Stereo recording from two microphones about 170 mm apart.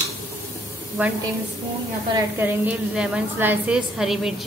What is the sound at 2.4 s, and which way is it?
A woman's voice, 10° right (ahead or behind).